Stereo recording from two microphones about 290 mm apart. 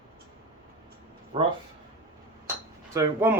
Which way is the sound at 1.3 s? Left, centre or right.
Centre.